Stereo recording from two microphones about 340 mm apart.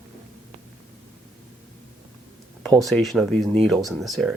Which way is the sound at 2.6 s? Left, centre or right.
Centre.